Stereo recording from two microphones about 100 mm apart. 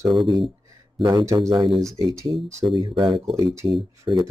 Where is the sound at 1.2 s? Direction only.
30° right (ahead or behind).